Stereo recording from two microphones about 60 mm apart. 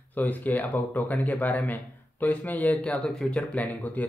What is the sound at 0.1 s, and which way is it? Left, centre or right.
Speech, left.